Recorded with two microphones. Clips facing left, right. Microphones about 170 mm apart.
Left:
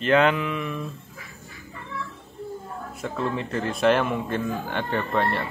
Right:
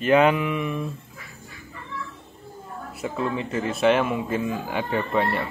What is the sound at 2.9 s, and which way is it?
Speech, 5° right (ahead or behind).